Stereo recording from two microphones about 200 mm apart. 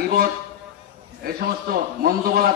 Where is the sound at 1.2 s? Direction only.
50° right (ahead or behind).